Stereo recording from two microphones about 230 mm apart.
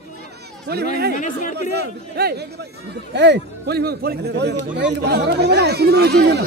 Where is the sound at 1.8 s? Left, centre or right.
Right.